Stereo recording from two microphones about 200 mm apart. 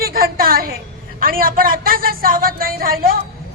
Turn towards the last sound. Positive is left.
turn(degrees=-45)  # may be behind; listen again after turning